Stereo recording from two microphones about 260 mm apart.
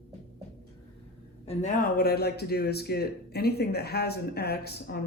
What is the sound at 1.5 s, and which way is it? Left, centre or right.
Speech, left.